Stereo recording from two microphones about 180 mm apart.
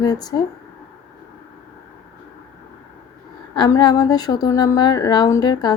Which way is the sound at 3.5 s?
25° left (ahead or behind).